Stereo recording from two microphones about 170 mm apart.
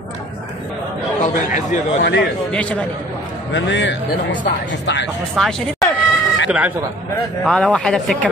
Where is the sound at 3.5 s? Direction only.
90° left.